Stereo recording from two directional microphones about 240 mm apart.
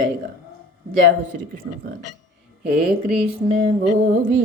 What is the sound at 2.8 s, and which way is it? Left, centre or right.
Speech, centre.